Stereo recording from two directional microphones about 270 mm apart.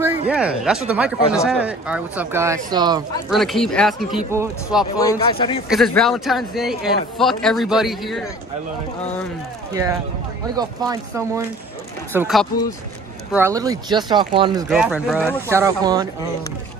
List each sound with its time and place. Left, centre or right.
0.3 s speech: centre
3.3 s speech: centre
4.9 s speech: centre
5.7 s speech: centre
10.5 s speech: centre
14.7 s speech: centre